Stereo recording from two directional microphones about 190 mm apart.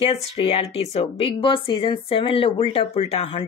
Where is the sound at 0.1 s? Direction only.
30° left (ahead or behind).